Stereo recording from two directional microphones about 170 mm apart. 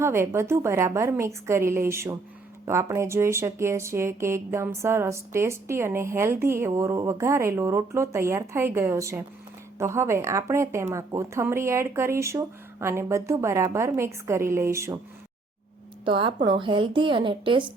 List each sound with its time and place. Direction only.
0.0 s speech: 15° right (ahead or behind)
16.0 s a woman's voice: 30° right (ahead or behind)